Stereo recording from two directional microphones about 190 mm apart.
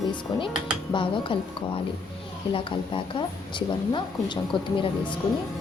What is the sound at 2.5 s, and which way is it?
Speech, 25° left (ahead or behind).